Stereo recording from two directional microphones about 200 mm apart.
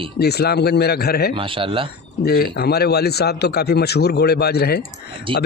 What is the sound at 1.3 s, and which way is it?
Speech, 25° right (ahead or behind).